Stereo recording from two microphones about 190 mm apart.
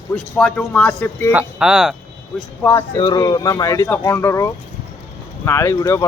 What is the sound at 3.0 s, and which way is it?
Speech, 20° left (ahead or behind).